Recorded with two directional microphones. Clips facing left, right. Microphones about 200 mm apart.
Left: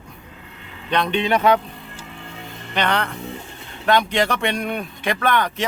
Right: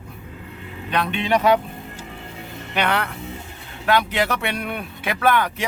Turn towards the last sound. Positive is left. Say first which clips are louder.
# right 1 dB
turn(degrees=-5)  # may be behind; listen again after turning